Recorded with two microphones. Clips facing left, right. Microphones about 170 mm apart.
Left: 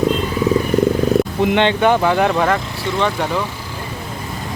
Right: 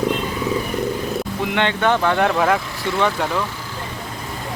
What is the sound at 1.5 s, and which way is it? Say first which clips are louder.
Speech: left 4 dB; 20° left (ahead or behind).